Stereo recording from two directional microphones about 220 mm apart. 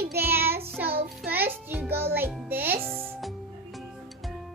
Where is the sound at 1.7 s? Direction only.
10° right (ahead or behind).